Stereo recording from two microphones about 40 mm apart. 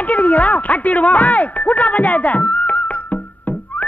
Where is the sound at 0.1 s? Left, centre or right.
Left.